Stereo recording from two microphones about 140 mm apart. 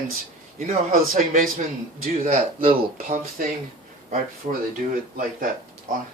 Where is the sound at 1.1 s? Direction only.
80° right.